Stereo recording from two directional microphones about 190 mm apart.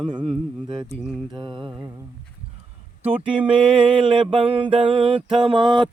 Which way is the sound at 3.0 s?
30° right (ahead or behind).